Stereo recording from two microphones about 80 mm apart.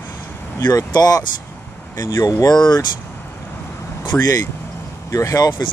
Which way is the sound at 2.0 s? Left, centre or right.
Left.